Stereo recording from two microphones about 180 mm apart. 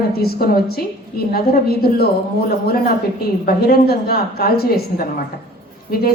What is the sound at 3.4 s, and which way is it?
A woman's voice, 60° left (ahead or behind).